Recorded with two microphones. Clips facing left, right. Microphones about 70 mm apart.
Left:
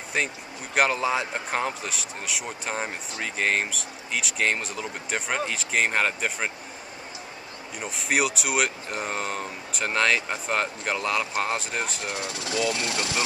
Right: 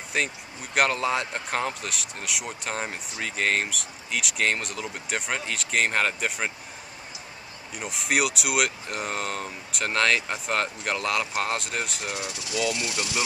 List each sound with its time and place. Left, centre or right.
0.1 s a man's voice: centre
7.8 s a man's voice: centre
12.1 s speech: centre
12.6 s speech: left